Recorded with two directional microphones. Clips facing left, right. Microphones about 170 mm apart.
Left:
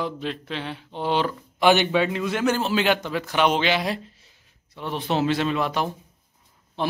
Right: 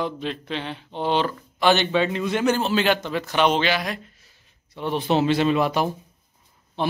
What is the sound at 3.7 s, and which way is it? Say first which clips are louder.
Speech: left 2 dB; 30° left (ahead or behind).